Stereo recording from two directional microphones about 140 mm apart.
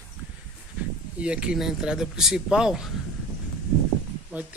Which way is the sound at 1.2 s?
5° right (ahead or behind).